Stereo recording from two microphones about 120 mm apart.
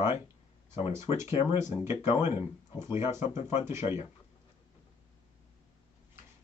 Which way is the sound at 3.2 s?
80° left.